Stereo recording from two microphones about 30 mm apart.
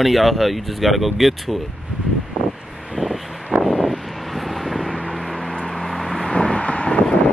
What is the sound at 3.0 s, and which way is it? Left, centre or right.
Vehicle, left.